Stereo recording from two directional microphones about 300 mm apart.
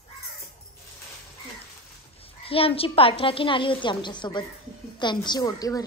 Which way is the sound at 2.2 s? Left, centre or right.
Centre.